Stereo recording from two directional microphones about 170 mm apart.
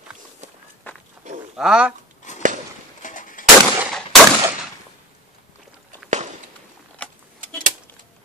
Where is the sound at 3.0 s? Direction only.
50° left (ahead or behind).